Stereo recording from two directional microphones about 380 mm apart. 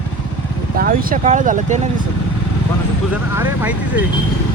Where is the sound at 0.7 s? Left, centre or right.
Right.